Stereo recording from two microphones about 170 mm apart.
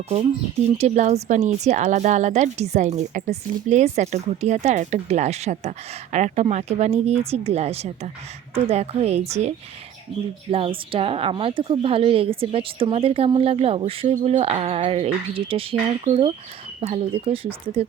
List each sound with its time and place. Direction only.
0.8 s a woman's voice: 40° right (ahead or behind)
10.5 s a woman's voice: 30° right (ahead or behind)